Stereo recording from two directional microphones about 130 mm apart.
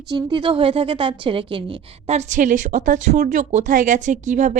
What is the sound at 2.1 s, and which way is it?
A woman's voice, 65° right (ahead or behind).